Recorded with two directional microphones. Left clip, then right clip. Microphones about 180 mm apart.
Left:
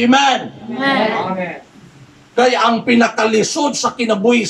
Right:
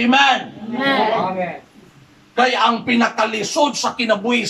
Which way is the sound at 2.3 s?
35° left (ahead or behind).